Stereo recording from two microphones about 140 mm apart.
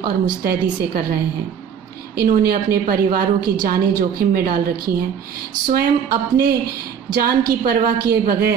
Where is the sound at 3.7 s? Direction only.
90° right.